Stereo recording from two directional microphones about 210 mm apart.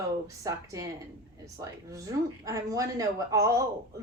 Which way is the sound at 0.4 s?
15° right (ahead or behind).